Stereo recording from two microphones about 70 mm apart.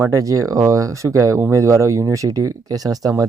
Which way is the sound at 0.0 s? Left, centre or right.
Right.